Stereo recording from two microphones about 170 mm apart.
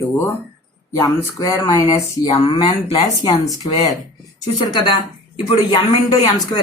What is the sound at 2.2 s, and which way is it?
Speech, 35° left (ahead or behind).